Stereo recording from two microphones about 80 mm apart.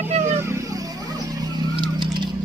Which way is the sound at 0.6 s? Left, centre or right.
Right.